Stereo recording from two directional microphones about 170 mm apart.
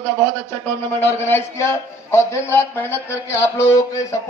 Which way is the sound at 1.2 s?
15° left (ahead or behind).